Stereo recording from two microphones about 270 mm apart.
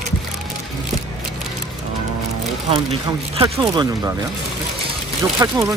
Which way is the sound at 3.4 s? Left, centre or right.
Centre.